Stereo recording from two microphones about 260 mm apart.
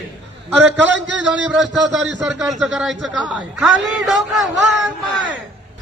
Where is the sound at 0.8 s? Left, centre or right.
Right.